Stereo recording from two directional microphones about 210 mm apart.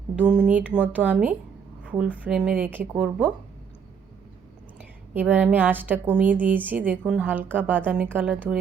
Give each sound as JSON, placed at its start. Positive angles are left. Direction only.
{"t": 0.2, "sound": "a woman's voice", "side_deg": -5}
{"t": 5.1, "sound": "a woman's voice", "side_deg": -10}